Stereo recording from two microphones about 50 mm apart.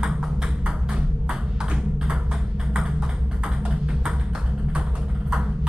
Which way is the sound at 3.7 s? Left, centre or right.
Centre.